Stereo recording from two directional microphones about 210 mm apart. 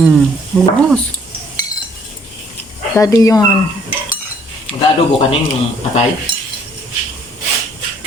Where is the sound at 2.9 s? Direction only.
15° left (ahead or behind).